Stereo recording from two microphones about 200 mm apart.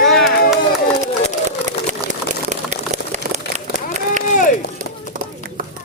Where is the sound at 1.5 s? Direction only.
35° right (ahead or behind).